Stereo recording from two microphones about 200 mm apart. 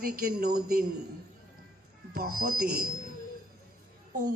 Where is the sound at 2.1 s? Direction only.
50° right (ahead or behind).